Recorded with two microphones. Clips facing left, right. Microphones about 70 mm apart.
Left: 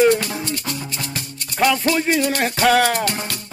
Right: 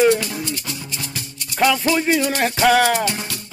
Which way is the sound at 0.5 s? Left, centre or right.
Left.